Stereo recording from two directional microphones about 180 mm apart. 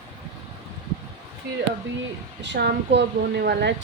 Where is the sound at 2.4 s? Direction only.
75° right (ahead or behind).